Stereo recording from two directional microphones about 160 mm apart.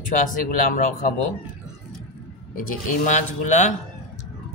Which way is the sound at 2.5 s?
50° left (ahead or behind).